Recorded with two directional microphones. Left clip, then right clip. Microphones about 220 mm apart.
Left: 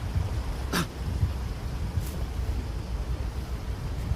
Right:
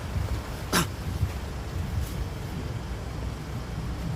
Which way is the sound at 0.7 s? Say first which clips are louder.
Right 4 dB; 20° right (ahead or behind).